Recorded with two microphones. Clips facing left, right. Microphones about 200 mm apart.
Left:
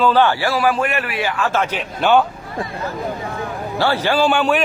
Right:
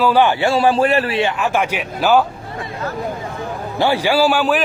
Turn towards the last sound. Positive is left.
turn(degrees=-5)  # may be behind; listen again after turning